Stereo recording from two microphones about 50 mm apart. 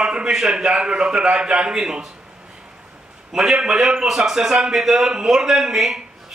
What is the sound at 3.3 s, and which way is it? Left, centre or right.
A man's voice, centre.